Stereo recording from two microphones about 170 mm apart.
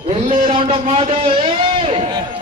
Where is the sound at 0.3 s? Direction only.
50° right (ahead or behind).